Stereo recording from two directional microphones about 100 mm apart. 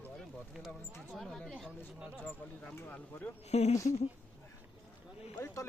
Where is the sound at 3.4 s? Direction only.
90° left.